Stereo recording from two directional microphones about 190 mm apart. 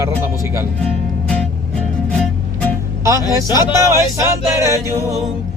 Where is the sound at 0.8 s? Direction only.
5° left (ahead or behind).